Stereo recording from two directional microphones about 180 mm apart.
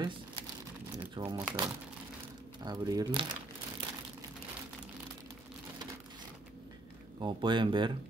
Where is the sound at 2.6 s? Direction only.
20° right (ahead or behind).